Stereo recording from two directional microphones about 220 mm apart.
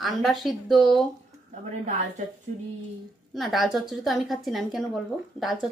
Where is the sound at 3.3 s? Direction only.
Centre (ahead or behind).